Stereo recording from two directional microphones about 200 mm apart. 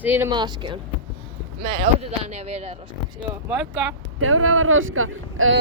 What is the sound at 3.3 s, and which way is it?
Speech, 5° right (ahead or behind).